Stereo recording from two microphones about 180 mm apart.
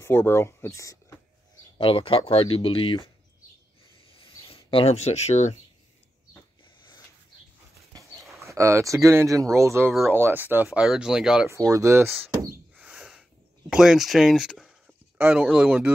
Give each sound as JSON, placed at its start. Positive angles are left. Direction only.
{"t": 0.0, "sound": "speech", "side_deg": 10}
{"t": 1.8, "sound": "speech", "side_deg": 30}
{"t": 4.5, "sound": "speech", "side_deg": 30}
{"t": 8.2, "sound": "a sound", "side_deg": 0}
{"t": 8.5, "sound": "speech", "side_deg": -15}
{"t": 11.4, "sound": "speech", "side_deg": -15}
{"t": 12.7, "sound": "a sound", "side_deg": -5}
{"t": 13.7, "sound": "speech", "side_deg": 0}